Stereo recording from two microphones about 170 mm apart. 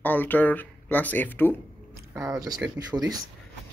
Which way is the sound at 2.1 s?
20° right (ahead or behind).